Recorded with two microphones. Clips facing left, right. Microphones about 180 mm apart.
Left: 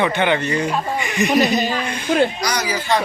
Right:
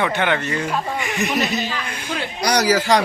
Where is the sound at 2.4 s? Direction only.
75° right (ahead or behind).